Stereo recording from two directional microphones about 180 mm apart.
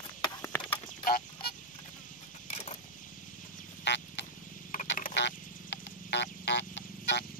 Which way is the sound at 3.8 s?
75° left (ahead or behind).